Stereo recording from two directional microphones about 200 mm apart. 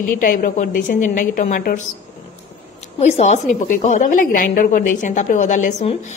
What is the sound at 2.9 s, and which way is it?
A woman's voice, 35° left (ahead or behind).